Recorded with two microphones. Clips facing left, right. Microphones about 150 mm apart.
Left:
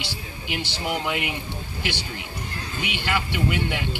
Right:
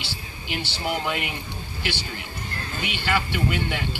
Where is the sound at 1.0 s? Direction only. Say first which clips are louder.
Left 1 dB; 15° left (ahead or behind).